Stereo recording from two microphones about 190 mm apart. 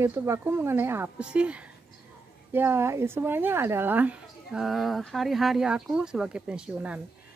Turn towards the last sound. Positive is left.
turn(degrees=-5)  # may be behind; listen again after turning